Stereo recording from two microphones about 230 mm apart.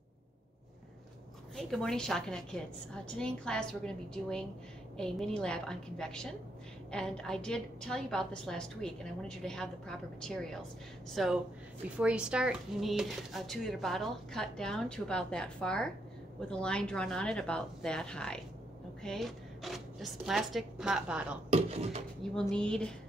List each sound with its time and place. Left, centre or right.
1.6 s speech: centre
21.5 s speech: right
22.2 s speech: centre